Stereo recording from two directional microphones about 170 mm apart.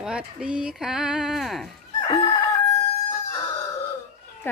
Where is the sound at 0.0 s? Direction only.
5° right (ahead or behind).